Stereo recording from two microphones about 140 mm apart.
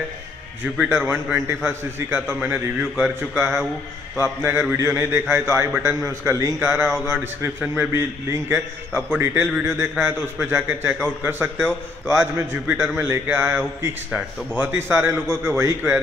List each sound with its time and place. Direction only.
0.8 s a man's voice: 15° right (ahead or behind)